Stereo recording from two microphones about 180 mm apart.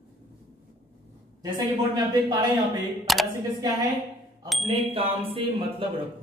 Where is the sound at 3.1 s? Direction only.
Centre (ahead or behind).